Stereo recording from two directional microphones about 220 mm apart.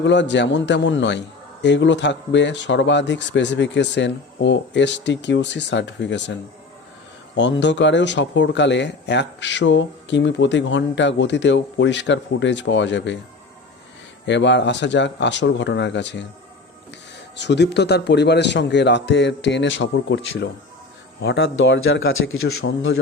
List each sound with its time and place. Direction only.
0.0 s speech: 55° left (ahead or behind)
7.3 s speech: 55° left (ahead or behind)
14.3 s speech: 55° left (ahead or behind)
17.3 s speech: 50° left (ahead or behind)